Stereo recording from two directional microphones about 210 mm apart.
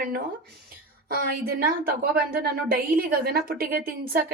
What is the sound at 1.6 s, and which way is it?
A woman's voice, 45° right (ahead or behind).